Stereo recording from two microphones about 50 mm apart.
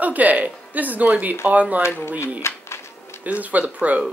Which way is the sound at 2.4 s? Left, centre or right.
Left.